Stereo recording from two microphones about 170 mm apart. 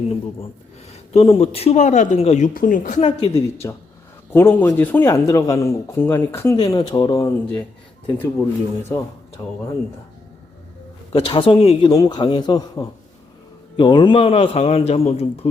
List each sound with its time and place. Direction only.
0.9 s speech: 35° left (ahead or behind)
3.2 s speech: 15° left (ahead or behind)
11.1 s a man's voice: 30° left (ahead or behind)